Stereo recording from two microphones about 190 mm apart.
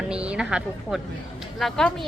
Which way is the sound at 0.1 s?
5° right (ahead or behind).